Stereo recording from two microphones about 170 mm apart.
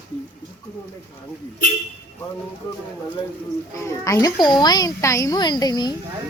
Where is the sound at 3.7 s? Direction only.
15° left (ahead or behind).